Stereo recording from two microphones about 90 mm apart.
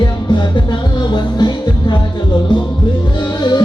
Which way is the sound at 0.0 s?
55° left (ahead or behind).